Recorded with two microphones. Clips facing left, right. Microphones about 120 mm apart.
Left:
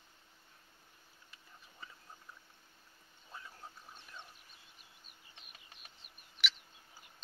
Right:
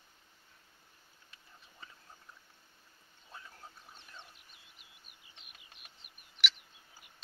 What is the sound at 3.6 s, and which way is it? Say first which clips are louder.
Duck: left 1 dB; 10° left (ahead or behind).